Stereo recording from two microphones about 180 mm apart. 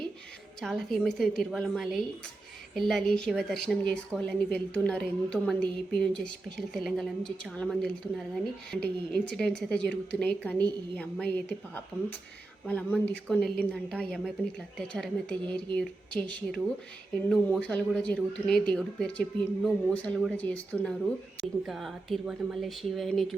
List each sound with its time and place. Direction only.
0.6 s a woman's voice: centre (ahead or behind)
12.6 s a woman's voice: 10° left (ahead or behind)